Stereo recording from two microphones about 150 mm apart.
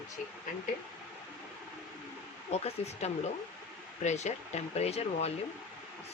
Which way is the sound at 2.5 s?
45° left (ahead or behind).